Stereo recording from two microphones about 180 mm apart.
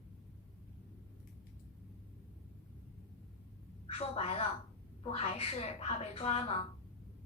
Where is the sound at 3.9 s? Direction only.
35° left (ahead or behind).